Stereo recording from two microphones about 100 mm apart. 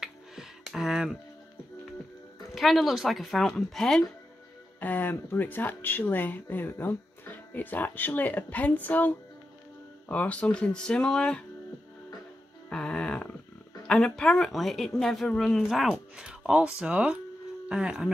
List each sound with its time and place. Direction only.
0.0 s a sound: 5° right (ahead or behind)
2.5 s speech: centre (ahead or behind)
4.7 s speech: 15° left (ahead or behind)
12.6 s music: 10° left (ahead or behind)
13.8 s speech: 10° left (ahead or behind)
15.9 s speech: 10° right (ahead or behind)